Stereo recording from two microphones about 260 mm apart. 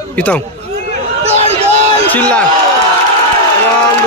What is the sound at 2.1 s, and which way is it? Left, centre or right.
Speech, centre.